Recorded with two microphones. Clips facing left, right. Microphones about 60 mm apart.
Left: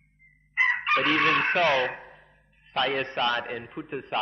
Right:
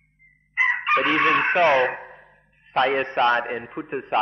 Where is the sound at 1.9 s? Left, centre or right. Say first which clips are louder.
Right 6 dB; right.